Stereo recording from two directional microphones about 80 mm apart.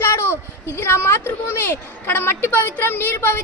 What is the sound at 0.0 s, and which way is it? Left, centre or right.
Speech, left.